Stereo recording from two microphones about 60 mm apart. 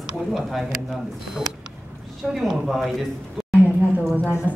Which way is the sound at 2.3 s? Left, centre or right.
Centre.